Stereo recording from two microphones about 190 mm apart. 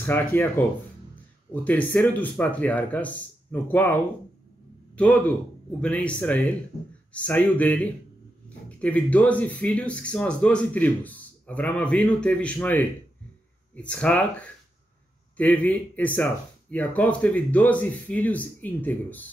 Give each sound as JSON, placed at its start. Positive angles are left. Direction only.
{"t": 0.0, "sound": "a man's voice", "side_deg": 10}